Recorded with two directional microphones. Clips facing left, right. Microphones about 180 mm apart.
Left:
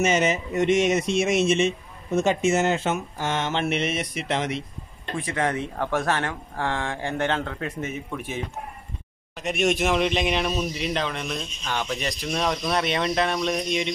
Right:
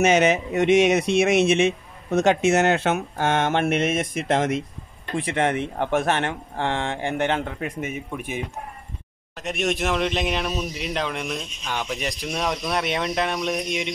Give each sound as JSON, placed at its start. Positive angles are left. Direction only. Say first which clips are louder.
{"t": 0.0, "sound": "speech", "louder": "right 4 dB", "side_deg": -65}
{"t": 5.1, "sound": "speech", "louder": "right 3 dB", "side_deg": -30}
{"t": 9.4, "sound": "speech", "louder": "left 2 dB", "side_deg": 0}